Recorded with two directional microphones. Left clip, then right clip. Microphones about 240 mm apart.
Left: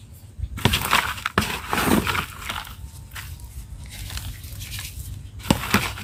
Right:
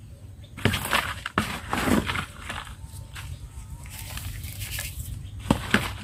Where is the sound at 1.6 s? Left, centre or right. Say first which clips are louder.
Left 4 dB; left.